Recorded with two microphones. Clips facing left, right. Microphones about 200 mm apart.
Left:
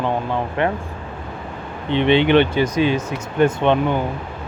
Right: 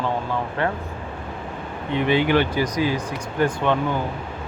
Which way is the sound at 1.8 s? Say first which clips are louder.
Left 4 dB; 25° left (ahead or behind).